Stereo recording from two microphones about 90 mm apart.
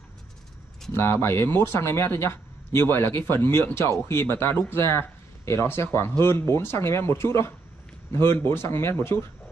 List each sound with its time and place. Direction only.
0.9 s speech: 25° left (ahead or behind)